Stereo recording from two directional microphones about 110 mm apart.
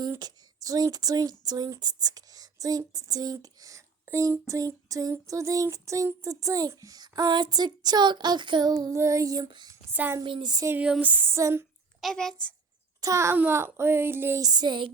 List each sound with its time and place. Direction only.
0.2 s speech: 35° right (ahead or behind)
9.9 s female singing: 15° right (ahead or behind)
10.2 s speech: 50° right (ahead or behind)
10.8 s female singing: 10° right (ahead or behind)
11.9 s a child's voice: 5° left (ahead or behind)
13.0 s speech: 30° right (ahead or behind)
14.4 s speech: 40° right (ahead or behind)